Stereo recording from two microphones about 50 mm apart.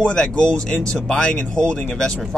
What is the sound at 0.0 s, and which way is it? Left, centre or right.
Speech, centre.